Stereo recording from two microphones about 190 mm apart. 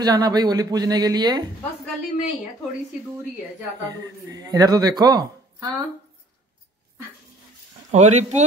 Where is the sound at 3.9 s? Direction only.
20° right (ahead or behind).